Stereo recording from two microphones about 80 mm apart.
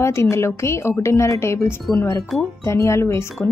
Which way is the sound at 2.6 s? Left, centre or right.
Left.